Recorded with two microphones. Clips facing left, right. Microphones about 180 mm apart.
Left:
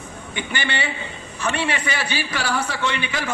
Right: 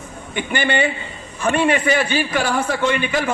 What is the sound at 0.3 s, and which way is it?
A man's voice, 50° right (ahead or behind).